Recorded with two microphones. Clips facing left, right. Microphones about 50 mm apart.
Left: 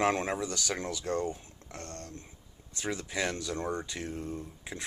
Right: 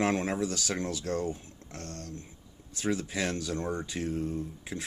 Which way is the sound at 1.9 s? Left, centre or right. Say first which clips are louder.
Right 4 dB; left.